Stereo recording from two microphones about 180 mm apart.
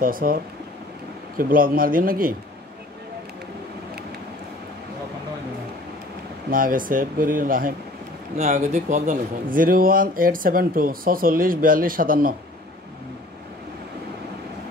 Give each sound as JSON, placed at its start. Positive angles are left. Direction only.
{"t": 0.0, "sound": "a man's voice", "side_deg": -55}
{"t": 6.5, "sound": "a man's voice", "side_deg": -50}
{"t": 8.4, "sound": "a man's voice", "side_deg": -40}